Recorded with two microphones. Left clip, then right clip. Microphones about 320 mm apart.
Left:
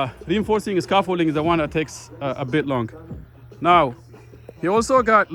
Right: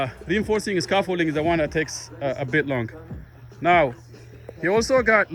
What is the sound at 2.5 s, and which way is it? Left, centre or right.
Speech, left.